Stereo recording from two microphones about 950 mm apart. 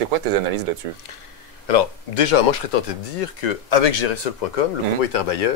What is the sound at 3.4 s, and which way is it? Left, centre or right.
Speech, left.